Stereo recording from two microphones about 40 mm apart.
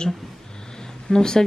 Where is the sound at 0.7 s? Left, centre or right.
Centre.